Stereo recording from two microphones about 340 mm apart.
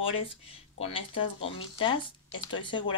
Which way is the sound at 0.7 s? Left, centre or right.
Centre.